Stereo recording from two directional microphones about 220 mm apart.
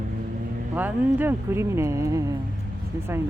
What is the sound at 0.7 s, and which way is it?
Speech, 10° right (ahead or behind).